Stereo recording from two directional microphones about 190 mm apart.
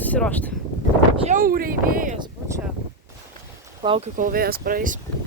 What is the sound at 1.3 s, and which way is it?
Speech, 50° right (ahead or behind).